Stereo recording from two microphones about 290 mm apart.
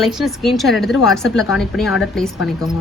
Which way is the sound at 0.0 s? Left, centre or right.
Centre.